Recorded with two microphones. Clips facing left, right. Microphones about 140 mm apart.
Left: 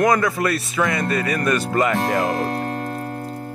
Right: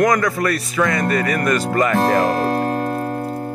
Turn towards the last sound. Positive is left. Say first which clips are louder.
# right 6 dB
turn(degrees=-55)  # may be behind; listen again after turning